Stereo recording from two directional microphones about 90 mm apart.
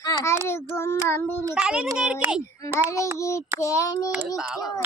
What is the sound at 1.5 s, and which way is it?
Speech, 10° right (ahead or behind).